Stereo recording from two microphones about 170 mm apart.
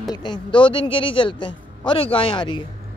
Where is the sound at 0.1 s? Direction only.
25° left (ahead or behind).